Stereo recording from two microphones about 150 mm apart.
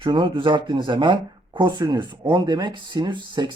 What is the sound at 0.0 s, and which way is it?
Speech, 35° right (ahead or behind).